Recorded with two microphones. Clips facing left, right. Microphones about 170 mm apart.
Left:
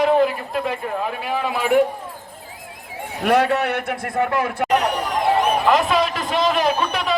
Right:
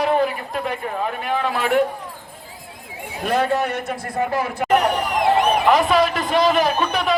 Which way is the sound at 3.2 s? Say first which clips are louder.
Left 2 dB; 70° left (ahead or behind).